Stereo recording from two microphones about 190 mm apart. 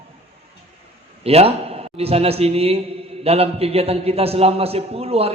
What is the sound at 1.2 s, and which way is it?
A man's voice, 30° right (ahead or behind).